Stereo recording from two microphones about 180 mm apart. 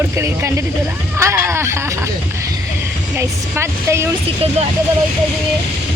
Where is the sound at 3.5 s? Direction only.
15° right (ahead or behind).